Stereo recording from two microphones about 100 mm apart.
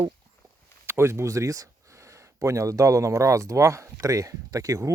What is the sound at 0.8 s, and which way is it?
Speech, 25° right (ahead or behind).